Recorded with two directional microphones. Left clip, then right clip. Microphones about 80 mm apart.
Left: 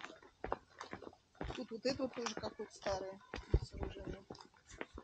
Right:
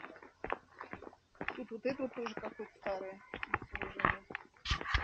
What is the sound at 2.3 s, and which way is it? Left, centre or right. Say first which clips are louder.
Speech: right 1 dB; left.